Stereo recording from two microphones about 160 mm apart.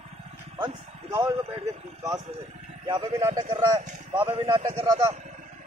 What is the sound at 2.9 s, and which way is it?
Speech, 20° right (ahead or behind).